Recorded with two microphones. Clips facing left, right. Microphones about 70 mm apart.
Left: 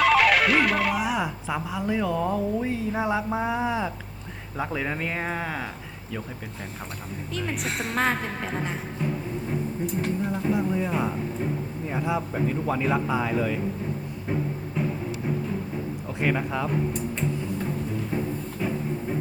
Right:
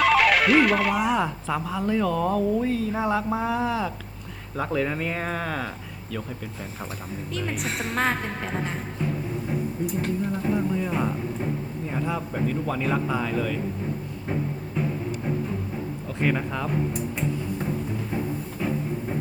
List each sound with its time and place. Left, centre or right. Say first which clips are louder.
0.0 s music: even; centre
1.9 s a man's voice: right 2 dB; centre
4.5 s a man's voice: right 3 dB; centre
7.3 s a woman's voice: even; centre
9.8 s a woman's voice: even; centre
16.2 s a woman's voice: even; centre